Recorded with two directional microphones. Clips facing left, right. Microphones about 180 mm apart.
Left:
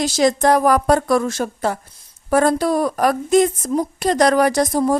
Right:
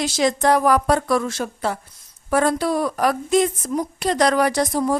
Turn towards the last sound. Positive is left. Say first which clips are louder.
# left 3 dB
turn(degrees=40)  # may be behind; listen again after turning